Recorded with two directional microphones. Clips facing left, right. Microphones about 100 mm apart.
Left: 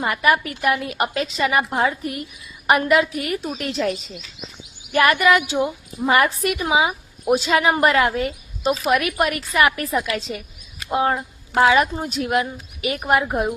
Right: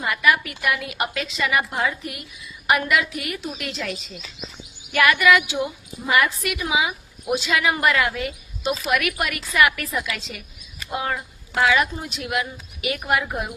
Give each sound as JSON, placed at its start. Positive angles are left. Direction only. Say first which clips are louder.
{"t": 0.0, "sound": "a woman's voice", "louder": "left 2 dB", "side_deg": 35}
{"t": 5.1, "sound": "a woman's voice", "louder": "left 1 dB", "side_deg": 35}